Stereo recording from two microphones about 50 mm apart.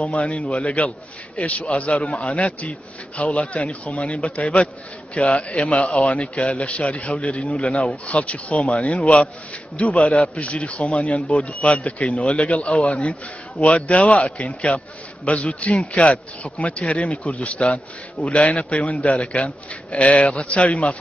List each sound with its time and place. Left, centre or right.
0.0 s speech: left